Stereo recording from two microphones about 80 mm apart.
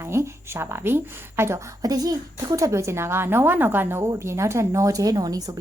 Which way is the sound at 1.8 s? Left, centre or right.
Right.